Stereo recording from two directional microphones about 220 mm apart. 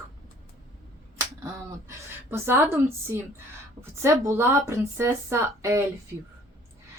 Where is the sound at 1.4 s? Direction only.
10° right (ahead or behind).